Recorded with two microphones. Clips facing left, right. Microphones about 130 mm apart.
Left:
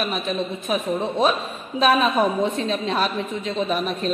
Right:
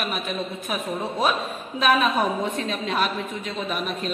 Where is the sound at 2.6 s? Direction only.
30° left (ahead or behind).